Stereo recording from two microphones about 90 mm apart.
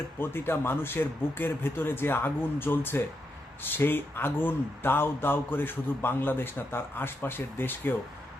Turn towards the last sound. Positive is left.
turn(degrees=25)  # may be behind; listen again after turning